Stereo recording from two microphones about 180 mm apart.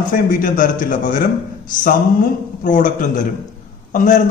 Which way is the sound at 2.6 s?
45° left (ahead or behind).